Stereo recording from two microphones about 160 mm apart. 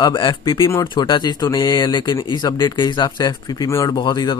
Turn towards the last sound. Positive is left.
turn(degrees=30)  # may be behind; listen again after turning